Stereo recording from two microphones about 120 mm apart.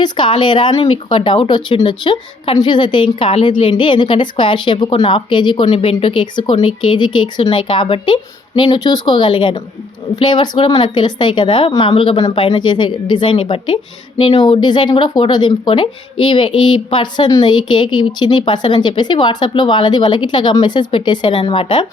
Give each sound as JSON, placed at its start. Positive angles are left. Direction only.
{"t": 0.0, "sound": "a woman's voice", "side_deg": 40}
{"t": 0.7, "sound": "a woman's voice", "side_deg": 50}
{"t": 5.7, "sound": "a woman's voice", "side_deg": 55}
{"t": 14.4, "sound": "a woman's voice", "side_deg": 40}